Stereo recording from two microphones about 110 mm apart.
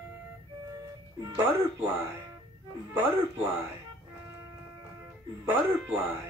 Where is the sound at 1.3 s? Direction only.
20° right (ahead or behind).